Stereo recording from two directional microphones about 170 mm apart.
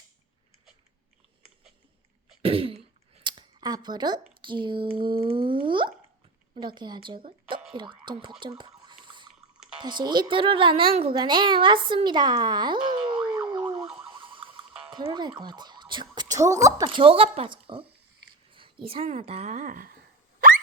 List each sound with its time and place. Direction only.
2.4 s throat clearing: 35° right (ahead or behind)
4.4 s a child's voice: 30° right (ahead or behind)
9.0 s a sound: 25° right (ahead or behind)
9.7 s a child's voice: 25° right (ahead or behind)
13.3 s boing: 25° right (ahead or behind)
13.8 s siren: 5° right (ahead or behind)
14.1 s a sound: 30° right (ahead or behind)
14.9 s a child's voice: 25° right (ahead or behind); by 20.0 s 55° right (ahead or behind)